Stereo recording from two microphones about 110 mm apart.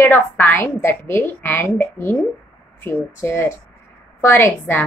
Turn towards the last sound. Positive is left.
turn(degrees=20)  # may be behind; listen again after turning